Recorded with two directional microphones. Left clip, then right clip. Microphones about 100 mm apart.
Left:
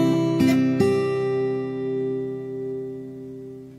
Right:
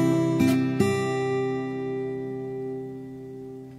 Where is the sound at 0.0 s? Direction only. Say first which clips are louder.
Left 2 dB; 30° right (ahead or behind).